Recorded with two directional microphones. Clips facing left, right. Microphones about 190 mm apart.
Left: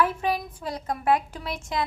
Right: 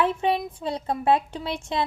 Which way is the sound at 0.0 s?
25° right (ahead or behind).